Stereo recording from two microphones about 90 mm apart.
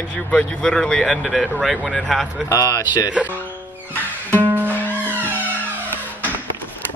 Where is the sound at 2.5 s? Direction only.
35° left (ahead or behind).